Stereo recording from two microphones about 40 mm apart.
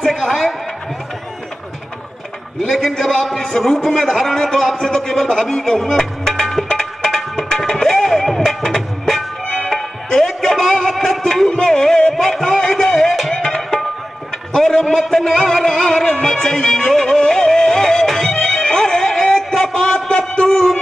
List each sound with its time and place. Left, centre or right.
0.0 s a man's voice: centre
3.0 s a man's voice: centre
5.6 s a man's voice: centre
5.9 s music: centre
10.0 s a sound: centre
11.2 s music: centre
12.2 s a sound: centre
13.5 s music: centre